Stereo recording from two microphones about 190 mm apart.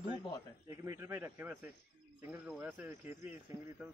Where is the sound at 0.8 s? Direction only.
15° right (ahead or behind).